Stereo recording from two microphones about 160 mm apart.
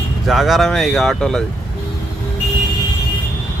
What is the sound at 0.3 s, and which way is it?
Speech, centre (ahead or behind).